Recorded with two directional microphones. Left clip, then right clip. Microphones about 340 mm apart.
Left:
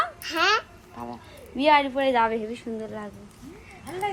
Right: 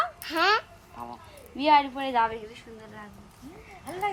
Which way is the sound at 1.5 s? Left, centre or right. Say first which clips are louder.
Left 2 dB; centre.